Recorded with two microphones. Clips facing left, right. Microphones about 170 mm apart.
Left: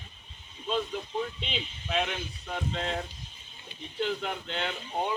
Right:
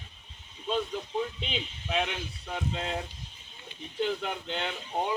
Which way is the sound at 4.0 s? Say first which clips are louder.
Right 1 dB; 5° right (ahead or behind).